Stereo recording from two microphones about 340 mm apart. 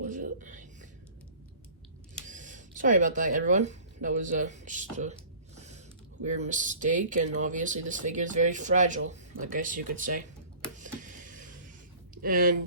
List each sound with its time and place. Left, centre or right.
0.0 s a sound: right
2.2 s speech: right
5.5 s mechanisms: centre
6.1 s speech: right
10.8 s a sound: right
12.2 s speech: right